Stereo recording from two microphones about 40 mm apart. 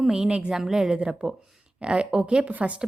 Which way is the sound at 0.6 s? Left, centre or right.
Centre.